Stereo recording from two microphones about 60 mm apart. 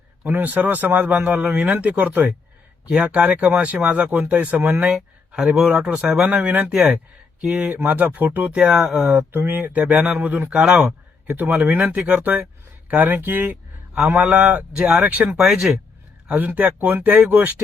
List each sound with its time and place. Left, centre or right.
0.3 s speech: right
4.9 s speech: centre
6.2 s speech: right
6.7 s speech: centre
7.4 s speech: right
11.3 s speech: right